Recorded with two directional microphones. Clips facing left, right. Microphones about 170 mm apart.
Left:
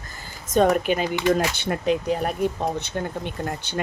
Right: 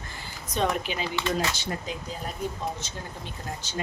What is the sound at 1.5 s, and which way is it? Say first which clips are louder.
Speech: left 10 dB; 60° left (ahead or behind).